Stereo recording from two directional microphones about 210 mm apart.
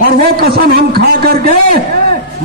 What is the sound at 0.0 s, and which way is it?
A man's voice, 45° right (ahead or behind).